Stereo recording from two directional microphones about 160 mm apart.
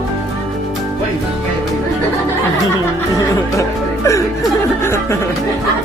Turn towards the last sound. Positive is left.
turn(degrees=15)  # may be behind; listen again after turning